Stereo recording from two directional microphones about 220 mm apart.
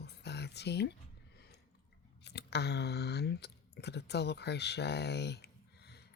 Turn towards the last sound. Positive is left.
turn(degrees=50)  # may be behind; listen again after turning